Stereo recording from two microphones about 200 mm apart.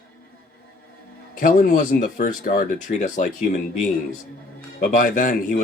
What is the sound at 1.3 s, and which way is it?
Speech, 40° left (ahead or behind).